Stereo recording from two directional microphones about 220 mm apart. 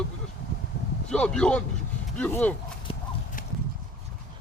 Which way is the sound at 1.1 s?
5° left (ahead or behind).